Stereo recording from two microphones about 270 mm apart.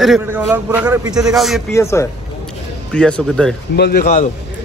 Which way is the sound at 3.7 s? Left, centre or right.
Left.